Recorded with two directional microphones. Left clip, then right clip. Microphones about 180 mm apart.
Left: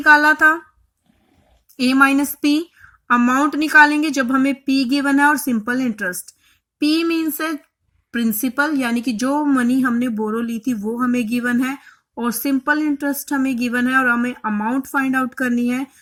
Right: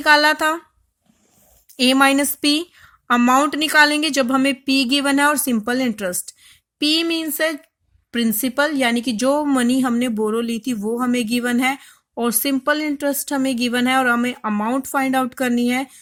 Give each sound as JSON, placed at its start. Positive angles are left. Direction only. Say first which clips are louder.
{"t": 0.0, "sound": "speech", "louder": "left 3 dB", "side_deg": -45}
{"t": 1.8, "sound": "a woman's voice", "louder": "even", "side_deg": -35}